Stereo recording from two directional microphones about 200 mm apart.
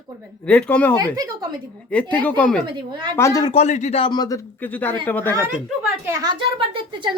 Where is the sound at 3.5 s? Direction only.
35° left (ahead or behind).